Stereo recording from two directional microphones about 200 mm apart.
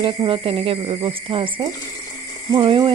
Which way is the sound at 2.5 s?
25° right (ahead or behind).